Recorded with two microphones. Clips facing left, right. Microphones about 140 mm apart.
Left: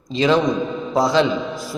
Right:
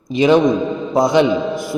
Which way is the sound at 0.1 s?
15° right (ahead or behind).